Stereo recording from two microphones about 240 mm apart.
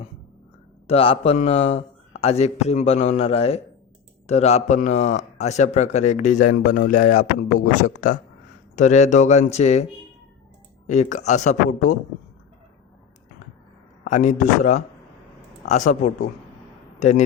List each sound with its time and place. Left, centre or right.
0.9 s a man's voice: left
10.8 s a man's voice: left
14.0 s a man's voice: left